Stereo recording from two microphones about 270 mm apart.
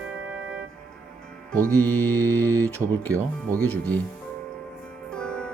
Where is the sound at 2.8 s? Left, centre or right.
Centre.